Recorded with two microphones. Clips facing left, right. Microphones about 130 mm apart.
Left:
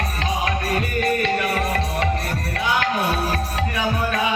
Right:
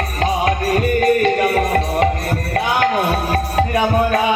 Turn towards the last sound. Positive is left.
turn(degrees=-45)  # may be behind; listen again after turning